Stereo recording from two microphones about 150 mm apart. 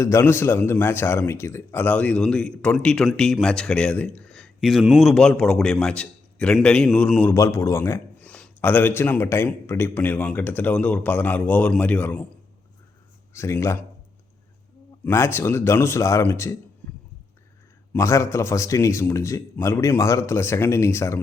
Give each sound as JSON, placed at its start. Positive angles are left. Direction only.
{"t": 0.0, "sound": "a man's voice", "side_deg": 15}
{"t": 13.3, "sound": "a man's voice", "side_deg": 20}
{"t": 15.0, "sound": "a man's voice", "side_deg": 15}
{"t": 17.9, "sound": "a man's voice", "side_deg": 20}